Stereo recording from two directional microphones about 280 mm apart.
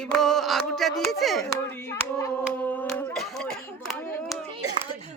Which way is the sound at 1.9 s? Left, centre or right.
Centre.